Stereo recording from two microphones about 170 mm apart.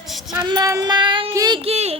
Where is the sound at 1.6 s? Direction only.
35° right (ahead or behind).